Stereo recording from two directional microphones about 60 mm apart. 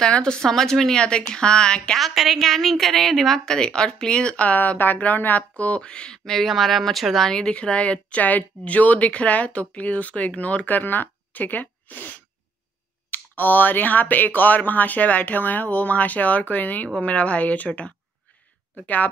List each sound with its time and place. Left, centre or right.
0.0 s a woman's voice: centre
2.0 s a woman's voice: centre; by 19.0 s left